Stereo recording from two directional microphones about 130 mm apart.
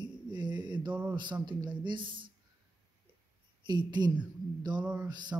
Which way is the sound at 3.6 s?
35° right (ahead or behind).